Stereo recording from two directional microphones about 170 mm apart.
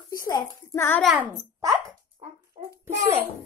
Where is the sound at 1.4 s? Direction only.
20° right (ahead or behind).